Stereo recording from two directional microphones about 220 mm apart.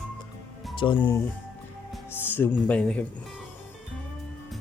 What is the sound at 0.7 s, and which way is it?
Speech, 20° left (ahead or behind).